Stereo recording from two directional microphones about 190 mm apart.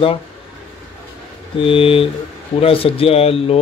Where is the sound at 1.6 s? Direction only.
30° left (ahead or behind).